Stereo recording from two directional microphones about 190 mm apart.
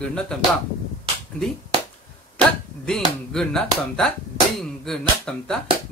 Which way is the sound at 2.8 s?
5° left (ahead or behind).